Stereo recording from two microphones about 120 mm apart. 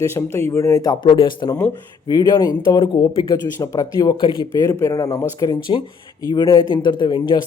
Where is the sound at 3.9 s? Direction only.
40° left (ahead or behind).